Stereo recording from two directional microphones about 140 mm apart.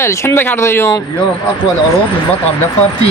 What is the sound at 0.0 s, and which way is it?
Speech, 20° left (ahead or behind).